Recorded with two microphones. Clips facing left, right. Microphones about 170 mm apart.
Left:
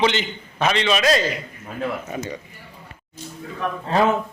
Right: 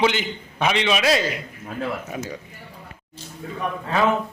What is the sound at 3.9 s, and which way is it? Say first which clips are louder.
Speech: left 2 dB; 35° left (ahead or behind).